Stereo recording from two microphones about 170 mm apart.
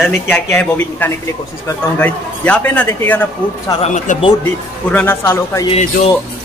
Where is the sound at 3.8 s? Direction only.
40° left (ahead or behind).